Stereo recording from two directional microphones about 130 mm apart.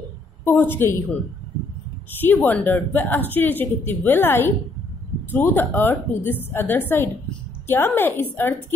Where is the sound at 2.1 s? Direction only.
15° left (ahead or behind).